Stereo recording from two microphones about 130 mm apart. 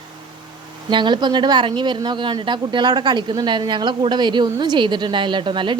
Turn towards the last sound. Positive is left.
turn(degrees=-40)  # may be behind; listen again after turning